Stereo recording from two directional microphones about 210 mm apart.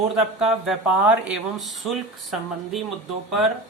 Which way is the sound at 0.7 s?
5° right (ahead or behind).